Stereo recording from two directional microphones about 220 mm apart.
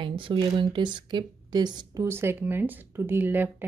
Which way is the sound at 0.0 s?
25° right (ahead or behind).